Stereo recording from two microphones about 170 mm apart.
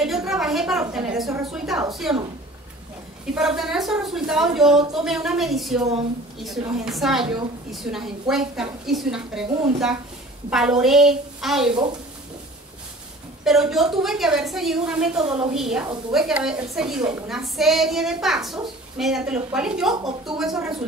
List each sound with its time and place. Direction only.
0.0 s a sound: centre (ahead or behind)
1.4 s a child's voice: centre (ahead or behind)
3.3 s a child's voice: centre (ahead or behind)
10.5 s a child's voice: 5° right (ahead or behind)
13.4 s a woman's voice: centre (ahead or behind)
15.2 s a woman's voice: 30° right (ahead or behind)
15.5 s a child's voice: 5° right (ahead or behind)